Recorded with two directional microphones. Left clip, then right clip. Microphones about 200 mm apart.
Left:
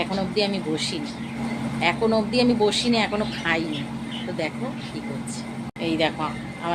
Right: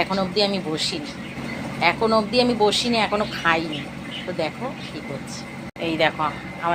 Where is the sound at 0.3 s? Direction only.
10° left (ahead or behind).